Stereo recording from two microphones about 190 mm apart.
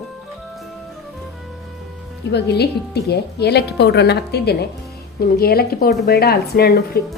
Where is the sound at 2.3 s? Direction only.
60° left (ahead or behind).